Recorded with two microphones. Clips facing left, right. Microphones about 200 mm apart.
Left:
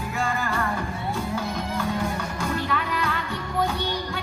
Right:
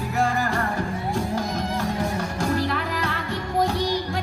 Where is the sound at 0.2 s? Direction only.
40° right (ahead or behind).